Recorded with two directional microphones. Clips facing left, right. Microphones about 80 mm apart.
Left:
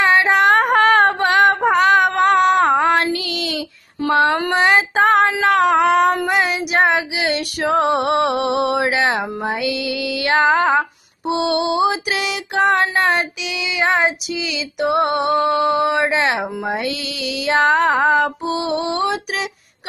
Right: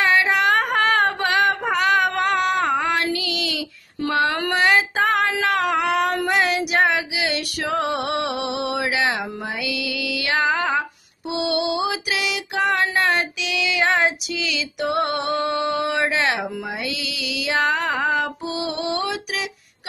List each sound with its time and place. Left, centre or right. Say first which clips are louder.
0.0 s a sound: left 4 dB; left
4.6 s female singing: left 2 dB; left
4.9 s child singing: left 6 dB; left
6.2 s child singing: left 2 dB; centre
6.8 s female singing: left 6 dB; left
11.2 s music: left 4 dB; left
16.7 s female singing: left 5 dB; left